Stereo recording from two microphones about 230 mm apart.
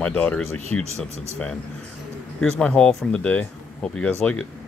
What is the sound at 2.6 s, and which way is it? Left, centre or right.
Speech, centre.